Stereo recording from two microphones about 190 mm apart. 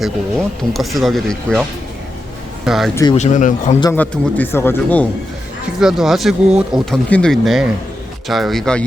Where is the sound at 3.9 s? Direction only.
10° left (ahead or behind).